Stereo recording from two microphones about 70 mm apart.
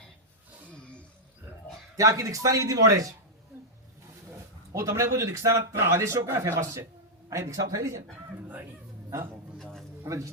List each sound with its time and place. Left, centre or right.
0.8 s roaring cats: centre
2.0 s speech: right
4.7 s speech: right
9.6 s a sound: centre
10.1 s speech: right